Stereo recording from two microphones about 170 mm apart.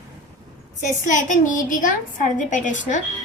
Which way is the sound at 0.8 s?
45° left (ahead or behind).